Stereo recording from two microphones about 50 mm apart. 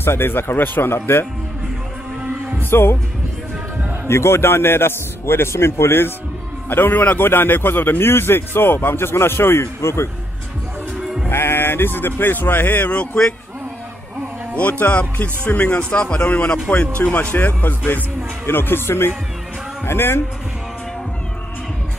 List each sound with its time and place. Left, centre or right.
0.0 s speech: left
2.7 s speech: left
4.1 s a man's voice: left
11.0 s music: centre
11.2 s speech: left
14.5 s speech: left
17.1 s speech: left